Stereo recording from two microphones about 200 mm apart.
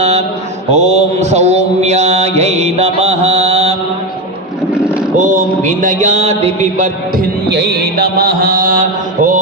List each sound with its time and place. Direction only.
0.0 s mantra: 35° right (ahead or behind)
5.1 s a sound: 40° right (ahead or behind)
7.4 s mantra: 60° right (ahead or behind); by 9.4 s 40° right (ahead or behind)